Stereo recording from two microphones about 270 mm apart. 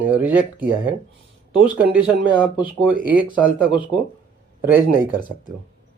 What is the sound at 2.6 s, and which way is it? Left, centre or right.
Speech, right.